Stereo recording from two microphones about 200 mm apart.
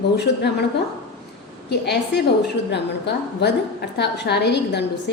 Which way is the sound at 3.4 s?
55° left (ahead or behind).